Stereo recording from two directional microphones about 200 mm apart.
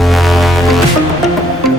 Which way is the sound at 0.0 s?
Centre (ahead or behind).